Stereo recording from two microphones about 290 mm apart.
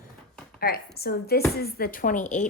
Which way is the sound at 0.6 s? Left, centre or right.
Left.